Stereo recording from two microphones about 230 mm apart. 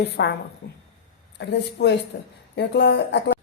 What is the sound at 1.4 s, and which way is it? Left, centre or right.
A woman's voice, left.